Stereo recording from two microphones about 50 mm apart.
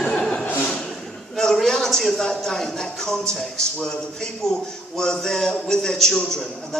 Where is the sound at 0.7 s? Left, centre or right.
Centre.